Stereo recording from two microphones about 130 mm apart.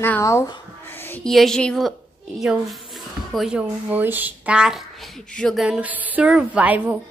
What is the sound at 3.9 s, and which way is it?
Speech, 15° right (ahead or behind).